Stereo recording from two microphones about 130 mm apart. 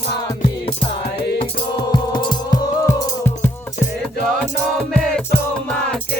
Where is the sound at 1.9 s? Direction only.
35° left (ahead or behind).